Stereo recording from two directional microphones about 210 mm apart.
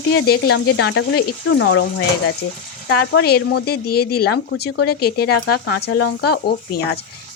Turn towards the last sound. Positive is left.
turn(degrees=50)  # may be behind; listen again after turning